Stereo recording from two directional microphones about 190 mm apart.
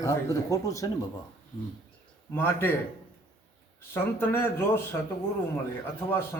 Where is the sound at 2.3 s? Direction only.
10° left (ahead or behind).